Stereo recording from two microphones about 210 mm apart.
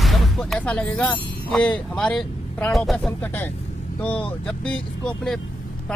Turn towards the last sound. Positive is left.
turn(degrees=5)  # may be behind; listen again after turning